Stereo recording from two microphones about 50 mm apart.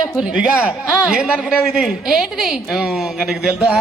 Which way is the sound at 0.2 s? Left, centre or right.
Right.